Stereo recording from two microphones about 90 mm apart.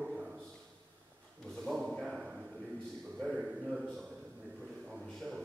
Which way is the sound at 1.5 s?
5° left (ahead or behind).